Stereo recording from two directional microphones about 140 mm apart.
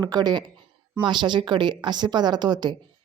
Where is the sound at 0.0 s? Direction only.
30° right (ahead or behind).